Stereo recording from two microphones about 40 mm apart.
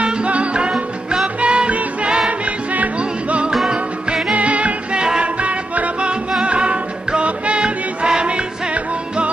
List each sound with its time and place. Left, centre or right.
0.0 s music: right